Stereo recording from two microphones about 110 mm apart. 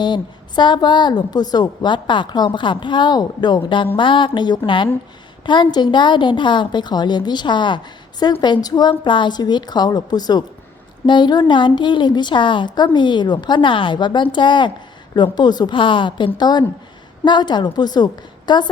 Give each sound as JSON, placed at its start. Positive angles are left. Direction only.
{"t": 0.0, "sound": "a woman's voice", "side_deg": 45}